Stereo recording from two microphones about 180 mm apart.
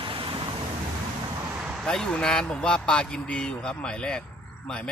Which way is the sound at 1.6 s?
5° right (ahead or behind).